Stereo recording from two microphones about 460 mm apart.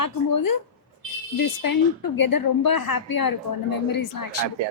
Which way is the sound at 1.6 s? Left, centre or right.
Left.